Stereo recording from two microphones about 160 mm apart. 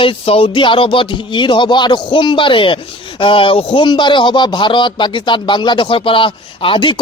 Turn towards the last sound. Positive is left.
turn(degrees=30)  # may be behind; listen again after turning